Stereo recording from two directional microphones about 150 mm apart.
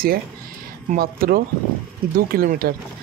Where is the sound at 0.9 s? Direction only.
75° right (ahead or behind).